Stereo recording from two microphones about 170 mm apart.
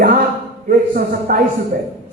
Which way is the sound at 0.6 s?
55° right (ahead or behind).